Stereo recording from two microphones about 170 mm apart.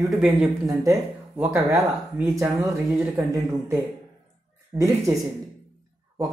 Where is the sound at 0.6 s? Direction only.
20° right (ahead or behind).